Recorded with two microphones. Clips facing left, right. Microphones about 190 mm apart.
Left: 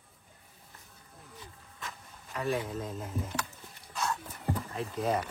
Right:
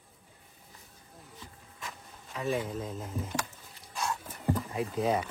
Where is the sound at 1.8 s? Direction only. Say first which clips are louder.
Even; centre (ahead or behind).